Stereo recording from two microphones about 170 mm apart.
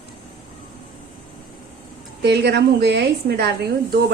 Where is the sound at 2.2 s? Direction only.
75° right (ahead or behind).